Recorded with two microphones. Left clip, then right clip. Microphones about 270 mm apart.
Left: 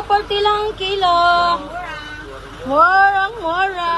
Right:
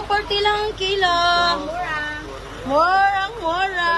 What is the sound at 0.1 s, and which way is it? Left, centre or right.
Speech, centre.